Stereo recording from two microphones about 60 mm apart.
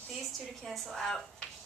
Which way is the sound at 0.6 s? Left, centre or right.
Centre.